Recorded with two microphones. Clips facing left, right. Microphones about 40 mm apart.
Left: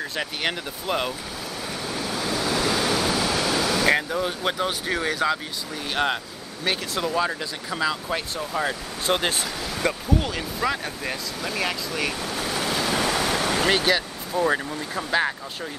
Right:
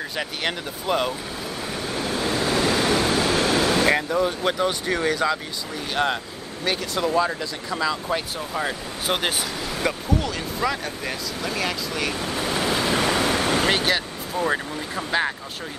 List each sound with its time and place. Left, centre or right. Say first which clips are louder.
0.1 s speech: right 2 dB; centre
2.0 s waves: right 3 dB; right
3.8 s speech: right 1 dB; centre
12.2 s waves: right 2 dB; centre
13.5 s speech: even; centre